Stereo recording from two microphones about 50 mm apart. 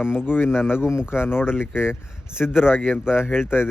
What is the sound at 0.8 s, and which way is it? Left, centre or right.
Speech, centre.